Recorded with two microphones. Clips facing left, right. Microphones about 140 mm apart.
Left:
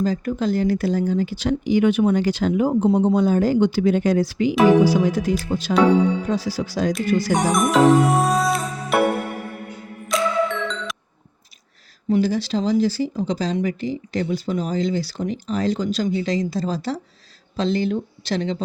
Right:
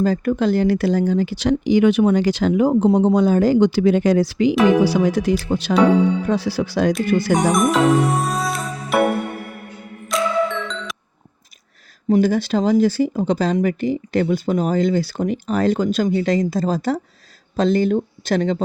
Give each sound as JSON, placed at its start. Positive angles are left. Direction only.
{"t": 0.0, "sound": "speech", "side_deg": -65}
{"t": 7.3, "sound": "music", "side_deg": 0}
{"t": 10.1, "sound": "music", "side_deg": 0}
{"t": 12.0, "sound": "speech", "side_deg": -50}